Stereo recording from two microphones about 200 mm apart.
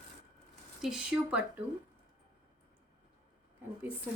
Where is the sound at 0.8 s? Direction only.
5° right (ahead or behind).